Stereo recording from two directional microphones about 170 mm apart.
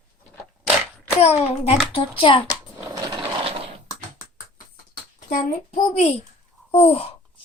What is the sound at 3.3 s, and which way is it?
Coin, 35° right (ahead or behind).